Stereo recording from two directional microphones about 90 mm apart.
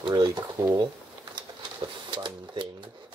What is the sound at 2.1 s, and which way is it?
Cash register, 60° right (ahead or behind).